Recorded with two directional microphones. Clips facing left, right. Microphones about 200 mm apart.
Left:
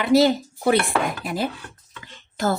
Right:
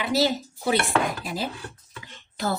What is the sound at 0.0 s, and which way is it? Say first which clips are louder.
Speech: left 7 dB; 55° left (ahead or behind).